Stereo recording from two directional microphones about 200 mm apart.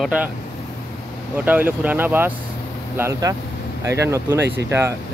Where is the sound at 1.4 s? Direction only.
10° right (ahead or behind).